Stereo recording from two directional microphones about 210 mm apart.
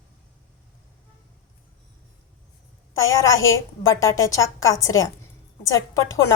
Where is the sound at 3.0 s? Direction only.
70° left (ahead or behind).